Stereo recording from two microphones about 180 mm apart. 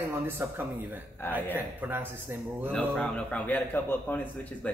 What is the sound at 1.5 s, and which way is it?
A man's voice, 10° right (ahead or behind).